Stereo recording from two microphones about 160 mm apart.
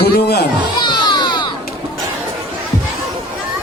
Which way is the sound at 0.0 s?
85° left.